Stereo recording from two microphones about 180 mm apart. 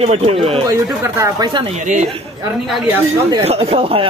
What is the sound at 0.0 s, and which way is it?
Speech, 35° right (ahead or behind).